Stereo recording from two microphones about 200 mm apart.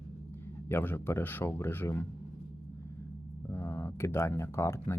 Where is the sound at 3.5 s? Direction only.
15° left (ahead or behind).